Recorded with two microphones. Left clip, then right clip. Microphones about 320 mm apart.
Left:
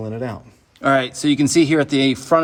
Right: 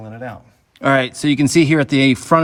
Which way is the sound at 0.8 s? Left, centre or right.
Centre.